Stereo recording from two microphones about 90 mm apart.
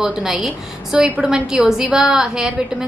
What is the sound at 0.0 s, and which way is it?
A woman's voice, 5° right (ahead or behind).